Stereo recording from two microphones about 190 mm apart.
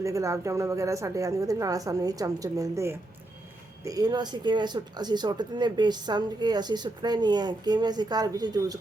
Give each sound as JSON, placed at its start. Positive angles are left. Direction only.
{"t": 0.0, "sound": "speech", "side_deg": -15}